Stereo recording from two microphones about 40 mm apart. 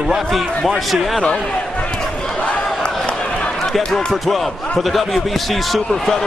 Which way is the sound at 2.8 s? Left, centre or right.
Left.